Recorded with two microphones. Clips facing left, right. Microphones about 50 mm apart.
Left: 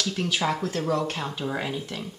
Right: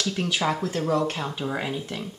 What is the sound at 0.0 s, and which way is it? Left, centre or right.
A woman's voice, centre.